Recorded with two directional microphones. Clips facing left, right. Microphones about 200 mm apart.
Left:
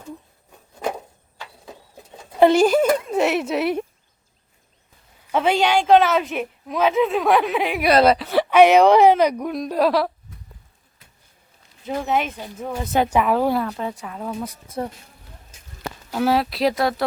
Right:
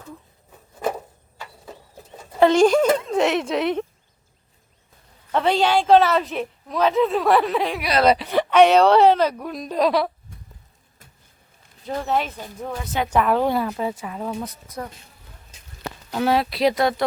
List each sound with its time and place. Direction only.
0.5 s a sound: 5° right (ahead or behind)
2.3 s speech: 10° left (ahead or behind)
5.3 s a woman's voice: 5° left (ahead or behind)
7.8 s a woman's voice: 50° left (ahead or behind)
8.0 s a woman's voice: centre (ahead or behind)
11.9 s a woman's voice: 10° left (ahead or behind)
16.1 s a woman's voice: 5° left (ahead or behind)